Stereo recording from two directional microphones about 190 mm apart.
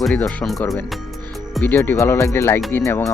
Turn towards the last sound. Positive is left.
turn(degrees=15)  # may be behind; listen again after turning